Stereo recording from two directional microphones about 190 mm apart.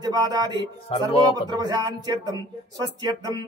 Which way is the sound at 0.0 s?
20° right (ahead or behind).